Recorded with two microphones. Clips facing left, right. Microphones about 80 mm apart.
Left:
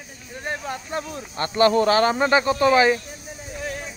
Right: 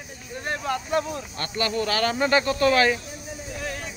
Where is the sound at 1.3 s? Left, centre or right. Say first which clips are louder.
Left 10 dB; left.